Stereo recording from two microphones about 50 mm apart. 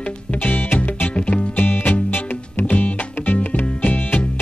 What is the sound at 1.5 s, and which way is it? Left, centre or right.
Music, left.